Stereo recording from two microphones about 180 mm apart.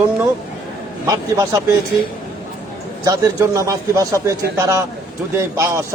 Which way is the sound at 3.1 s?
20° right (ahead or behind).